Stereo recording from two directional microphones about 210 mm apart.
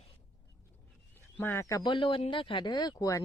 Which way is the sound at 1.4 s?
10° left (ahead or behind).